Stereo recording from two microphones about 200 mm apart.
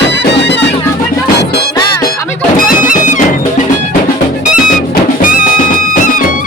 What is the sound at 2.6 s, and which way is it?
Music, 40° left (ahead or behind).